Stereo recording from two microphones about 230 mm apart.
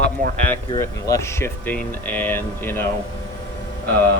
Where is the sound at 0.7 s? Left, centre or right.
Centre.